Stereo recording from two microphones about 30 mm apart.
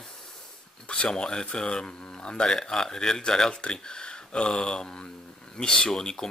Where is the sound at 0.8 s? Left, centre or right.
Left; by 3.2 s centre.